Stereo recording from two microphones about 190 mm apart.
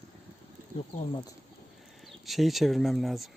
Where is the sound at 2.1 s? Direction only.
Centre (ahead or behind).